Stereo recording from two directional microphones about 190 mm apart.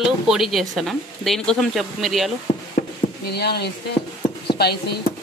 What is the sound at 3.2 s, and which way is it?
Speech, 60° left (ahead or behind).